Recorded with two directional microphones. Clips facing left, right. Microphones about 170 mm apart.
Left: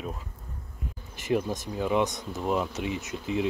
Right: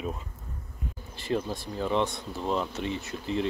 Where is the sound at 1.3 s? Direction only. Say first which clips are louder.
Left 2 dB; 15° left (ahead or behind).